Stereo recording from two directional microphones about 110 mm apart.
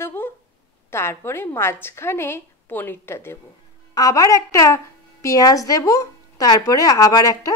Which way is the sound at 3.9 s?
35° left (ahead or behind).